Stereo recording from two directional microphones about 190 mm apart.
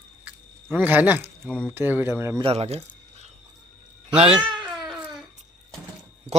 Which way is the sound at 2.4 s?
30° right (ahead or behind).